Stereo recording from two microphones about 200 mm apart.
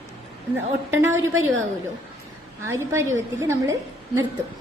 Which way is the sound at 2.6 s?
15° right (ahead or behind).